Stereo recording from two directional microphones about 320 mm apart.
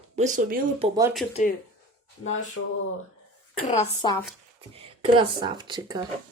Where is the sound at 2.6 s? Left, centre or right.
Left.